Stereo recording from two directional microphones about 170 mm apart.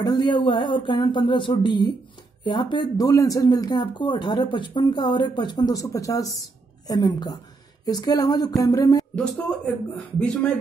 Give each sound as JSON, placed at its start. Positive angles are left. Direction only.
{"t": 0.0, "sound": "speech", "side_deg": 25}
{"t": 9.1, "sound": "speech", "side_deg": 5}